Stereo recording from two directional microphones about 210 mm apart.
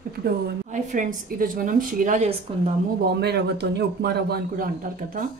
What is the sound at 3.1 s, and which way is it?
Speech, 50° right (ahead or behind).